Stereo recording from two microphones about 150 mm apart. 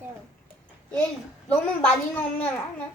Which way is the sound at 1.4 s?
10° left (ahead or behind).